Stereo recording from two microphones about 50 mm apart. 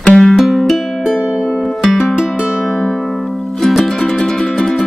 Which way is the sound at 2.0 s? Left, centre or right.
Centre.